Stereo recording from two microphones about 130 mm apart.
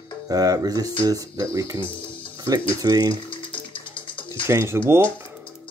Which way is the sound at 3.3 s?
40° left (ahead or behind).